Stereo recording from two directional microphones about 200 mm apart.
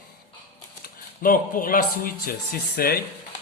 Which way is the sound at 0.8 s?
45° left (ahead or behind).